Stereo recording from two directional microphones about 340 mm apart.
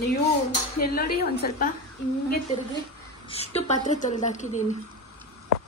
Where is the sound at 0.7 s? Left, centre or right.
Left.